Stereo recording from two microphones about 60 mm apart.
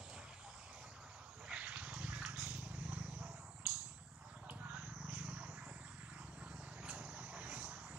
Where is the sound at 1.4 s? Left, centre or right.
Right.